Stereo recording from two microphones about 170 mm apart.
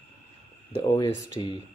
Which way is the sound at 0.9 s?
25° left (ahead or behind).